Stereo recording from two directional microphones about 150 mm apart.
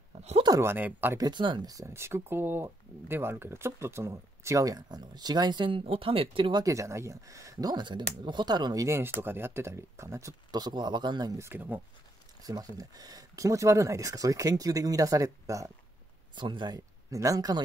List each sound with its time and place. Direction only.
0.4 s speech: 20° right (ahead or behind)
1.2 s speech: 30° right (ahead or behind)
6.6 s speech: 20° right (ahead or behind)
12.4 s speech: 25° right (ahead or behind)